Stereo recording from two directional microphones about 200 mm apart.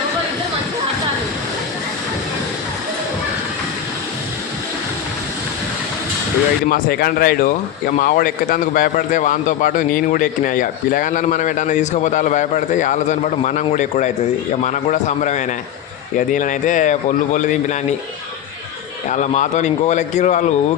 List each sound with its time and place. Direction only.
6.7 s speech: 45° left (ahead or behind)
19.1 s speech: 35° left (ahead or behind)